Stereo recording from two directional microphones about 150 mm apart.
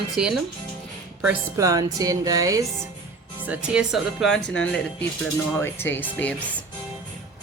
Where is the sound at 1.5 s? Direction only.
25° right (ahead or behind).